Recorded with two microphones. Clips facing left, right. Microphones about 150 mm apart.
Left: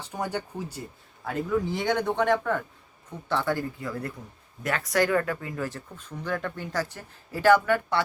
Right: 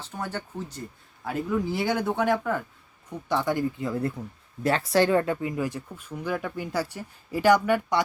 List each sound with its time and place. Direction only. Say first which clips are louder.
0.0 s speech: left 2 dB; 15° left (ahead or behind)
1.2 s speech: even; 5° right (ahead or behind)